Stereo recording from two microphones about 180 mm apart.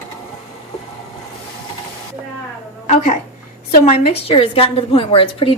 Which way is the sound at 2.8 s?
35° left (ahead or behind).